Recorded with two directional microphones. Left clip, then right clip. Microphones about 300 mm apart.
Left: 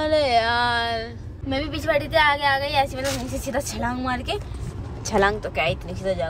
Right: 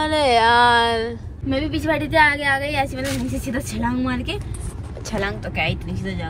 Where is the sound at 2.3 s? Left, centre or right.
Left.